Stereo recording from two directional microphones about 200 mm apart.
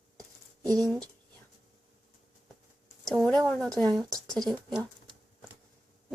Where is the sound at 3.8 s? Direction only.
Centre (ahead or behind).